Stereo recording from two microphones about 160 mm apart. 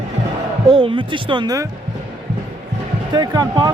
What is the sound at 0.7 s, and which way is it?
Speech, 30° right (ahead or behind).